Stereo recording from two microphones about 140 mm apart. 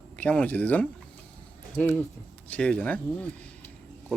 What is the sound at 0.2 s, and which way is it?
Speech, 10° left (ahead or behind).